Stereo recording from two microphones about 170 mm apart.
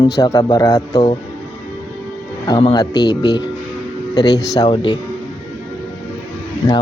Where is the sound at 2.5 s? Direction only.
25° left (ahead or behind).